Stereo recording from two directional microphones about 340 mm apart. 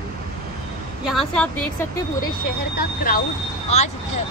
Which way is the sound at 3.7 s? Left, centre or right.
Centre.